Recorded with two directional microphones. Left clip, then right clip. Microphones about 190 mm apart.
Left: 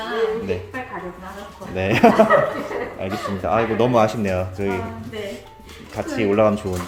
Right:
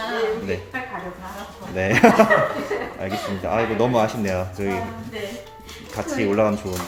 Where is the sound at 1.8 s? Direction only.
10° left (ahead or behind).